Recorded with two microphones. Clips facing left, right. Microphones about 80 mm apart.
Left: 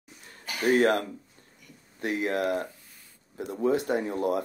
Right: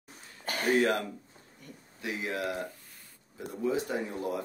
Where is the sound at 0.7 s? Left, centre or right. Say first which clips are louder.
Left 4 dB; left.